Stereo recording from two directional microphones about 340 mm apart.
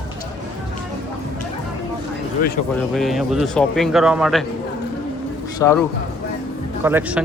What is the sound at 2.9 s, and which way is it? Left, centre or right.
A man's voice, centre.